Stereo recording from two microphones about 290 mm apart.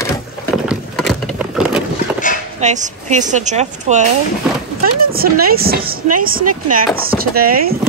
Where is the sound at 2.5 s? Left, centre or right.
Right.